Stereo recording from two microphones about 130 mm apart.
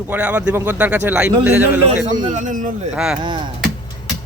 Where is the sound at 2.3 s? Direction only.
70° right (ahead or behind).